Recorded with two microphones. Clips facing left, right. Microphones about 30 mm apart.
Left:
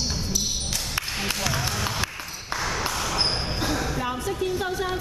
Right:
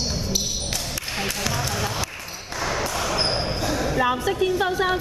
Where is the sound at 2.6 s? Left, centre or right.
Centre.